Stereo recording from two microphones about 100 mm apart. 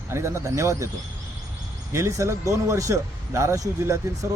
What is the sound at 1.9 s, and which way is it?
Speech, 30° right (ahead or behind).